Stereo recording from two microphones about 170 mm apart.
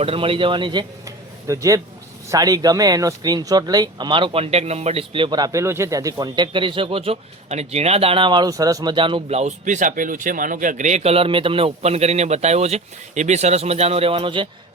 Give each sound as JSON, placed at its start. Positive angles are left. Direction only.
{"t": 0.0, "sound": "speech", "side_deg": -35}